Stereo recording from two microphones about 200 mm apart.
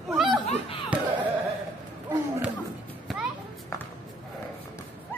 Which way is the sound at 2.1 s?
10° right (ahead or behind).